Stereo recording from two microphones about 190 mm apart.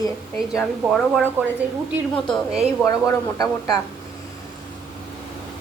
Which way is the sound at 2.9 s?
20° left (ahead or behind).